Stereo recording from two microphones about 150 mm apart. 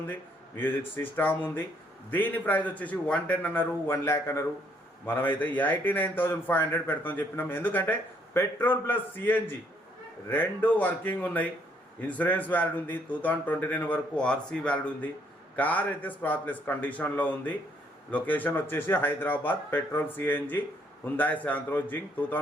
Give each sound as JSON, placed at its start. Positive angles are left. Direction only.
{"t": 0.1, "sound": "a man's voice", "side_deg": 15}